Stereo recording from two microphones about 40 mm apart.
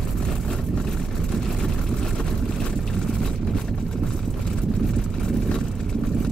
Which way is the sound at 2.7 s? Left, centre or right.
Centre.